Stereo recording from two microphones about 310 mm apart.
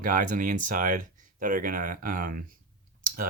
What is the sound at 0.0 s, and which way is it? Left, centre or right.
Speech, right.